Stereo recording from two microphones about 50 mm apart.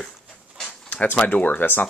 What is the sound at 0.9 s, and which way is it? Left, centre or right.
Speech, left.